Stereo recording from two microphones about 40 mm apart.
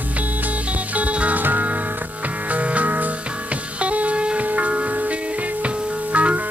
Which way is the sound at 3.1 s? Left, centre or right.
Right.